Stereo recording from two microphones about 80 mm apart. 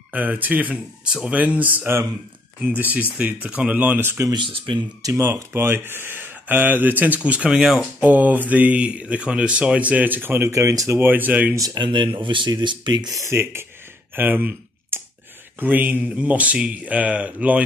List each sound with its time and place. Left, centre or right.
0.1 s speech: right
4.3 s speech: right
5.0 s speech: right
5.3 s speech: right; by 7.8 s centre
8.0 s speech: right
11.0 s speech: right
11.5 s speech: right
11.8 s speech: right
13.2 s speech: right
14.1 s a sound: right
15.6 s speech: right